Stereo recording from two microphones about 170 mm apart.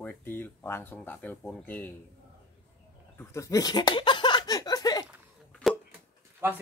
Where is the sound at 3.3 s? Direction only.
20° left (ahead or behind).